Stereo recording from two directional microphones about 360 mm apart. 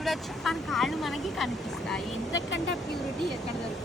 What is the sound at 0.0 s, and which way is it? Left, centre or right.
Speech, centre.